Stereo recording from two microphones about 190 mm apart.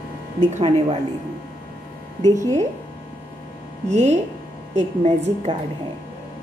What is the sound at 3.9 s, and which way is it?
A woman's voice, 35° right (ahead or behind).